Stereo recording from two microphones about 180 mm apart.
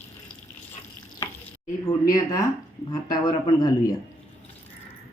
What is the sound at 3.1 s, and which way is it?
Speech, 20° left (ahead or behind).